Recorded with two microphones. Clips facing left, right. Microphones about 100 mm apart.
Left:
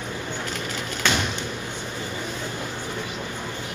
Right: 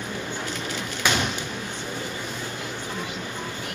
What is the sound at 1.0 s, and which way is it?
Sliding door, 10° right (ahead or behind).